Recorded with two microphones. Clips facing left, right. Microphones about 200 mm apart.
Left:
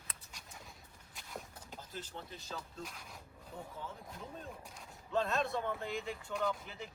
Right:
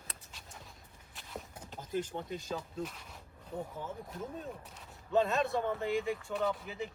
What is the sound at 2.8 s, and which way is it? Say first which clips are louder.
Speech: right 7 dB; 10° left (ahead or behind).